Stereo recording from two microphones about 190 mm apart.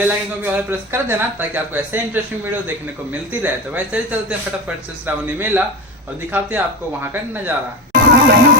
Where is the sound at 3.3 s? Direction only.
10° right (ahead or behind).